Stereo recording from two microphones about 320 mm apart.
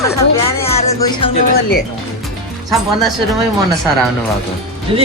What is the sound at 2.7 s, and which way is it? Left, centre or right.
Speech, centre.